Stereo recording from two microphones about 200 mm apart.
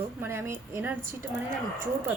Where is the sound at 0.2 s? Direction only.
10° right (ahead or behind).